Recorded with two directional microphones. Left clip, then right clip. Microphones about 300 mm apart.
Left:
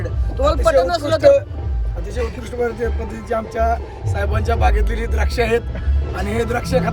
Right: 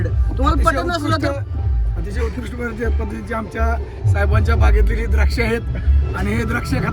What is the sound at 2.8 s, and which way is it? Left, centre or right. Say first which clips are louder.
Speech: left 1 dB; left.